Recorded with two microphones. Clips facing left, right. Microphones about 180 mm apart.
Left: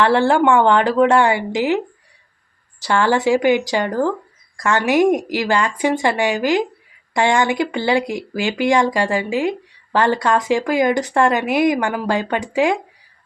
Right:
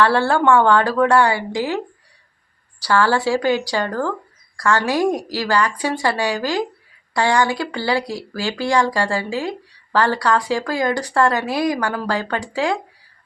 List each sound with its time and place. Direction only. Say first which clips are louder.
0.0 s speech: left 2 dB; 20° left (ahead or behind)
2.8 s speech: left 1 dB; 20° left (ahead or behind)